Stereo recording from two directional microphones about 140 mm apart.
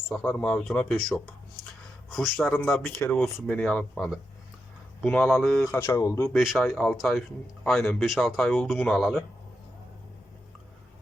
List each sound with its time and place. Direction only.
0.3 s speech: 10° left (ahead or behind)
5.7 s speech: 20° left (ahead or behind)
6.3 s speech: 5° right (ahead or behind)
6.6 s speech: 10° left (ahead or behind)
6.9 s speech: centre (ahead or behind)